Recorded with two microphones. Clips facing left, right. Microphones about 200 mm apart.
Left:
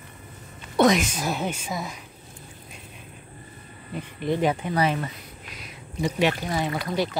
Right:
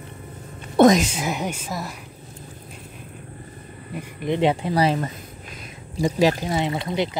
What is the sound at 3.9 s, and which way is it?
Speech, 15° right (ahead or behind).